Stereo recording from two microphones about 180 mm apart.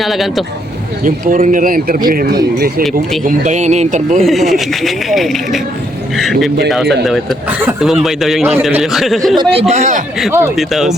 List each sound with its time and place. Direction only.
0.0 s a man's voice: centre (ahead or behind)
1.0 s speech: 45° right (ahead or behind)
3.2 s speech: 40° right (ahead or behind)
4.2 s a man's voice: centre (ahead or behind)
9.4 s speech: 30° right (ahead or behind)
10.5 s a man's voice: centre (ahead or behind)